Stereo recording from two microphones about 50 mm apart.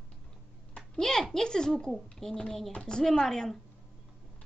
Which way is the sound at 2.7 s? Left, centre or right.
Centre.